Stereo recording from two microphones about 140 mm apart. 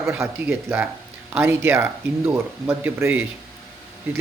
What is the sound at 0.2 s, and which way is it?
Speech, 15° right (ahead or behind).